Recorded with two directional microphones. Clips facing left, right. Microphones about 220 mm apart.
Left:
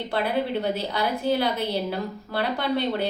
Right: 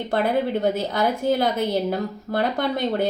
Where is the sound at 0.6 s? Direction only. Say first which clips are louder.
Right 4 dB; 45° right (ahead or behind).